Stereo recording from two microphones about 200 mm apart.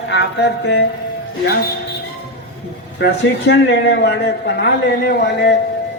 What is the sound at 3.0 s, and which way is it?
A man's voice, 55° left (ahead or behind).